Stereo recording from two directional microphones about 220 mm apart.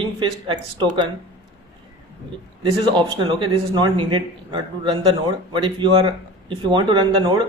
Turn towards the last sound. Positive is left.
turn(degrees=-20)  # may be behind; listen again after turning